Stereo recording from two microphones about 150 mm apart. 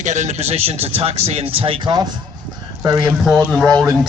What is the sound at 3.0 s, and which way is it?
A man's voice, centre (ahead or behind).